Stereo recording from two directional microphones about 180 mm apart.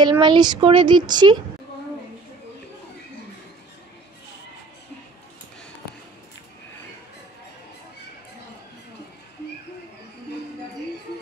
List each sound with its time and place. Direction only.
0.0 s speech: 25° right (ahead or behind)